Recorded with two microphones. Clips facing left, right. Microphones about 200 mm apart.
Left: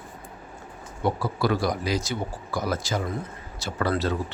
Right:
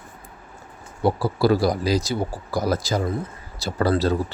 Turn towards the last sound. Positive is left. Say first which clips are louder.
# right 5 dB
turn(degrees=-35)  # may be behind; listen again after turning